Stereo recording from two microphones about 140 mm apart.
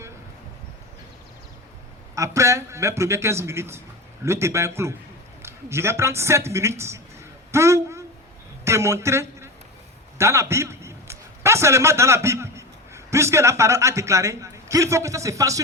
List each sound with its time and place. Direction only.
2.1 s a man's voice: 20° right (ahead or behind)
7.5 s a sound: 20° right (ahead or behind)
8.6 s a man's voice: 20° right (ahead or behind)